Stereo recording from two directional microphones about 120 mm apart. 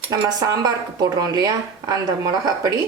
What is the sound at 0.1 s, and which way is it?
Speech, 30° right (ahead or behind).